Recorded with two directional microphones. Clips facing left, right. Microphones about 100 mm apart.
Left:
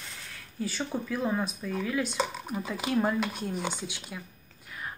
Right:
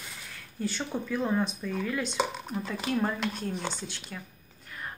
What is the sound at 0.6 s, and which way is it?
Speech, 5° left (ahead or behind).